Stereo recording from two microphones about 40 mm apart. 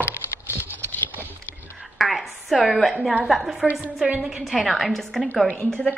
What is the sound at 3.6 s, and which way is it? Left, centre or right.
A woman's voice, centre.